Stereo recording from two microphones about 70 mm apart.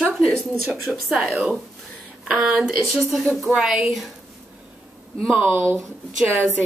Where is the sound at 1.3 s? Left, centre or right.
Centre.